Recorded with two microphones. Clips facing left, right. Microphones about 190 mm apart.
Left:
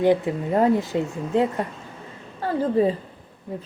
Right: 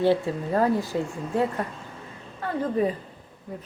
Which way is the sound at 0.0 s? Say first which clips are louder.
Left 3 dB; 15° left (ahead or behind).